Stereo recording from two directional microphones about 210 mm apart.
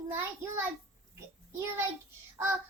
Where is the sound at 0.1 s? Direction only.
10° right (ahead or behind).